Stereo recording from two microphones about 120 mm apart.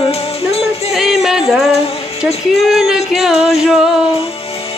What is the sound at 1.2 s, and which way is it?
Music, centre (ahead or behind).